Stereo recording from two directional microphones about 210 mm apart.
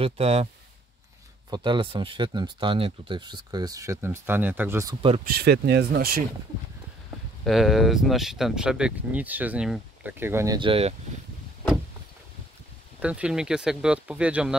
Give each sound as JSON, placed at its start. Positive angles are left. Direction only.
{"t": 0.0, "sound": "speech", "side_deg": -30}
{"t": 1.5, "sound": "speech", "side_deg": -20}
{"t": 5.3, "sound": "speech", "side_deg": -50}
{"t": 7.4, "sound": "speech", "side_deg": 0}
{"t": 13.0, "sound": "speech", "side_deg": -5}